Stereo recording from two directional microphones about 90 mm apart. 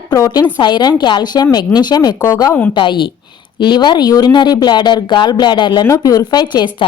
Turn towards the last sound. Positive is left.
turn(degrees=60)  # may be behind; listen again after turning